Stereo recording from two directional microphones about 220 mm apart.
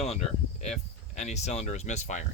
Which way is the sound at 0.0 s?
30° left (ahead or behind).